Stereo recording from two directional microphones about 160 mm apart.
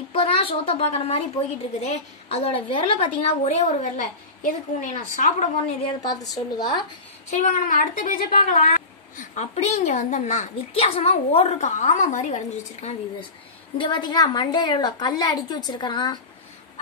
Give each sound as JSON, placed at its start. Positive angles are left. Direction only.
{"t": 0.1, "sound": "a child's voice", "side_deg": 35}
{"t": 6.3, "sound": "a woman's voice", "side_deg": 25}
{"t": 7.2, "sound": "a woman's voice", "side_deg": 50}
{"t": 13.7, "sound": "a woman's voice", "side_deg": 30}